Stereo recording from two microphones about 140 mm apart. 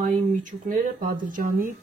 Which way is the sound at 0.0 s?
65° right (ahead or behind).